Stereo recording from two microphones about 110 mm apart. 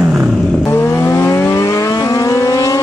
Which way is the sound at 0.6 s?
20° left (ahead or behind).